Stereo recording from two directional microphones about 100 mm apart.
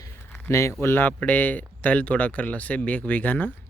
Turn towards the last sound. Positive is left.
turn(degrees=15)  # may be behind; listen again after turning